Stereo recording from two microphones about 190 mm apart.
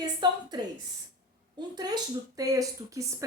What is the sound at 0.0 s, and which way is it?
Speech, 20° right (ahead or behind).